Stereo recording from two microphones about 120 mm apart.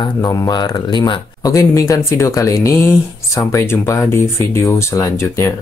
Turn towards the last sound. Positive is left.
turn(degrees=25)  # may be behind; listen again after turning